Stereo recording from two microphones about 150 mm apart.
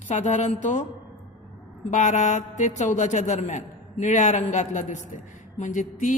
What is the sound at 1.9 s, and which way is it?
A man's voice, 55° left (ahead or behind).